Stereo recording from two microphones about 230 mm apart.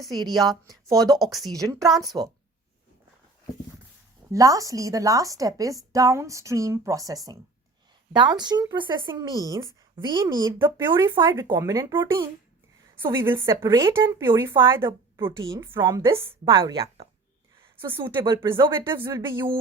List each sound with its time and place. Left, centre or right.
0.3 s a woman's voice: centre
1.1 s speech: centre
4.3 s a woman's voice: centre